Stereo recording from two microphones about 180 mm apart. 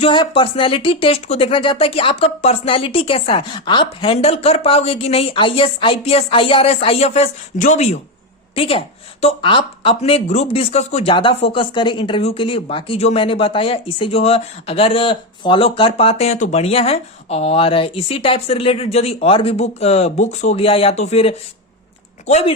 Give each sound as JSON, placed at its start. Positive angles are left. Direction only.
{"t": 0.0, "sound": "a woman's voice", "side_deg": 30}